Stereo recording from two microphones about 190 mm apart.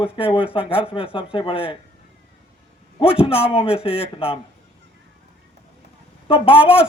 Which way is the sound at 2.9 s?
30° left (ahead or behind).